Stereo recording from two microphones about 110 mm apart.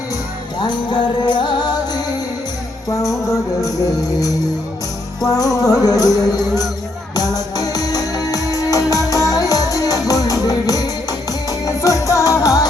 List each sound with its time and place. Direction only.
0.6 s music: 40° left (ahead or behind)
3.1 s music: centre (ahead or behind)
5.2 s music: 35° left (ahead or behind)